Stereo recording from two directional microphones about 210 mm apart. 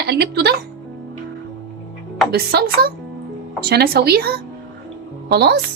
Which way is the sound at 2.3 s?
50° right (ahead or behind).